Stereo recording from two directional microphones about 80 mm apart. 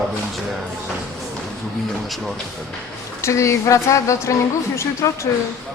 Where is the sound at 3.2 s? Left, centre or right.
Left.